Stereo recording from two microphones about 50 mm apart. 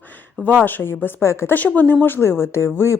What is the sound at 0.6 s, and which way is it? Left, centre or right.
Speech, left.